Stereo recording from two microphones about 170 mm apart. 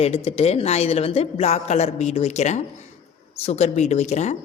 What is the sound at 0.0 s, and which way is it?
Speech, 35° left (ahead or behind).